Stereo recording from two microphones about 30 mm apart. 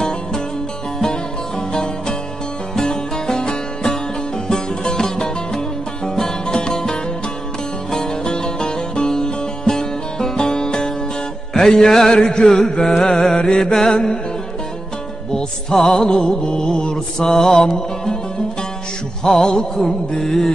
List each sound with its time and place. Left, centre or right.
1.7 s music: left
6.4 s music: left
6.7 s music: centre
8.0 s music: left
15.3 s music: centre
19.3 s music: left
20.2 s music: centre